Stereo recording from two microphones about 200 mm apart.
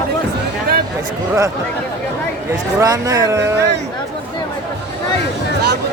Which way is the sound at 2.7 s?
15° right (ahead or behind).